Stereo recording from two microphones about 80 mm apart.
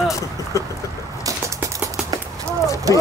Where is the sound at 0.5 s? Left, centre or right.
Left.